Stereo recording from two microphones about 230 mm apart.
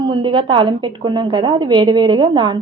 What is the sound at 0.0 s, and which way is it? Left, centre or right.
A woman's voice, right.